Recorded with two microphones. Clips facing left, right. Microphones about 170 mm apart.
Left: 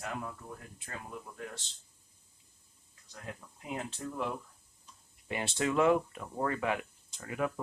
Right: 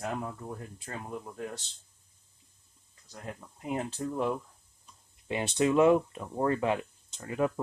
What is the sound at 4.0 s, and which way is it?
Speech, 30° right (ahead or behind).